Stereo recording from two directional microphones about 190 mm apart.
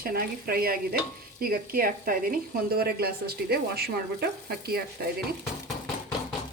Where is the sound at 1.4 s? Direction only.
50° right (ahead or behind).